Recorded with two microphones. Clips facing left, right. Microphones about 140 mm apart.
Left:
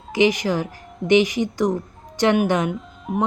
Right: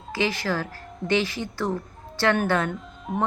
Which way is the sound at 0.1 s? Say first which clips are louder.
Left 7 dB; 15° left (ahead or behind).